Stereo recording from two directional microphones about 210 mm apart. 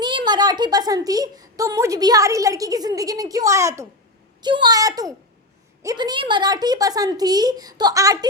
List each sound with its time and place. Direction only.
0.0 s a woman's voice: 20° right (ahead or behind)